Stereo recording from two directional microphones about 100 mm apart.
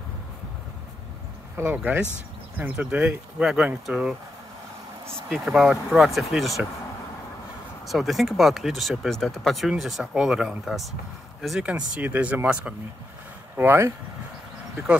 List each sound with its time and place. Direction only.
1.6 s speech: 20° right (ahead or behind)
5.3 s speech: 5° right (ahead or behind)
7.8 s speech: centre (ahead or behind)
11.6 s speech: 10° right (ahead or behind)
13.6 s speech: 25° right (ahead or behind)